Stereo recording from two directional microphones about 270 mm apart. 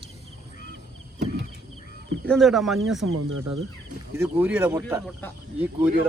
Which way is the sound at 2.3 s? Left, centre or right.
Centre.